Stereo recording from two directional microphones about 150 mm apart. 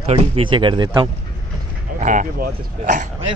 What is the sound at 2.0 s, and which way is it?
Speech, 60° right (ahead or behind).